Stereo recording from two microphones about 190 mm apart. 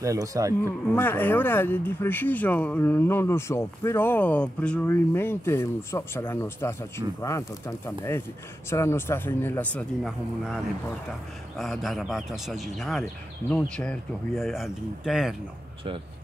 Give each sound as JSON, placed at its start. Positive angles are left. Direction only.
{"t": 0.0, "sound": "speech", "side_deg": -15}
{"t": 0.7, "sound": "speech", "side_deg": 10}
{"t": 11.5, "sound": "speech", "side_deg": 0}